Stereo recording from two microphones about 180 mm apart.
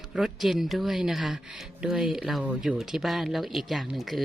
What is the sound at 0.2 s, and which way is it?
Speech, centre (ahead or behind).